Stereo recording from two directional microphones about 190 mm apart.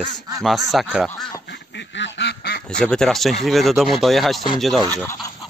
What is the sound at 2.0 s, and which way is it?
Quack, 70° left (ahead or behind).